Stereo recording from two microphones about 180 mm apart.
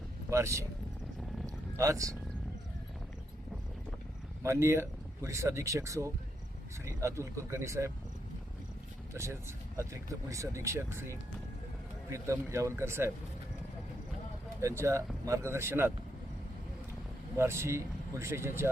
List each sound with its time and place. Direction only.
0.3 s speech: 15° right (ahead or behind)
1.8 s speech: 15° right (ahead or behind)
4.4 s speech: 15° right (ahead or behind)
9.1 s speech: 15° right (ahead or behind)
14.6 s speech: 15° right (ahead or behind)
17.3 s speech: 15° right (ahead or behind)